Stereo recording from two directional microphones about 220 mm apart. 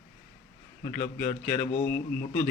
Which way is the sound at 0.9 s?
10° left (ahead or behind).